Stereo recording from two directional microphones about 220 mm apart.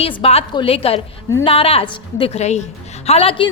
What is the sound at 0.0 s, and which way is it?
A woman's voice, 25° left (ahead or behind).